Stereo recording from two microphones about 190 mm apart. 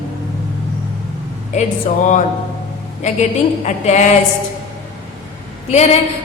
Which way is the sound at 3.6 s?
40° left (ahead or behind).